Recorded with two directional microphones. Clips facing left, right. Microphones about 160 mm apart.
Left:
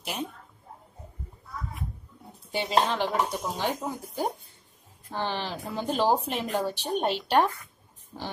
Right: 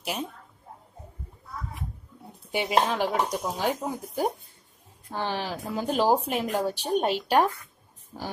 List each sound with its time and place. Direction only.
0.0 s a woman's voice: 10° right (ahead or behind)
2.5 s speech: 15° right (ahead or behind)